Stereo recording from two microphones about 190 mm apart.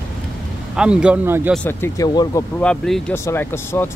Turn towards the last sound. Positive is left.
turn(degrees=10)  # may be behind; listen again after turning